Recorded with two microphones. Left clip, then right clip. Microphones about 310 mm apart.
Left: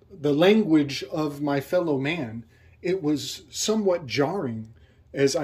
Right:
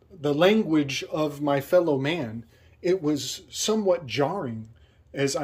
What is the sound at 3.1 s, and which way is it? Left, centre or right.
Speech, right.